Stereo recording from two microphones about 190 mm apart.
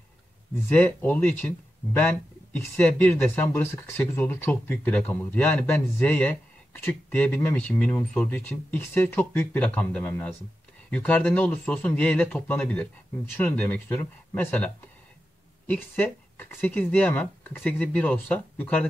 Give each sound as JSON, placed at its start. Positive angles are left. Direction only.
{"t": 0.7, "sound": "speech", "side_deg": 10}
{"t": 2.8, "sound": "speech", "side_deg": 10}